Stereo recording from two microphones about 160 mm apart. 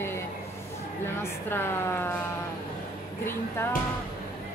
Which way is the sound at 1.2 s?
15° left (ahead or behind).